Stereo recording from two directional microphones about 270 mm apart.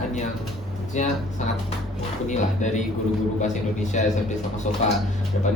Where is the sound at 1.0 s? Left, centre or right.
Left.